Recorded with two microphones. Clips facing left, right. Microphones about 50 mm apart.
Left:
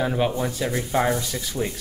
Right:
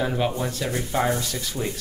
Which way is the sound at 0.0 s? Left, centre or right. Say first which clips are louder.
Left 2 dB; centre.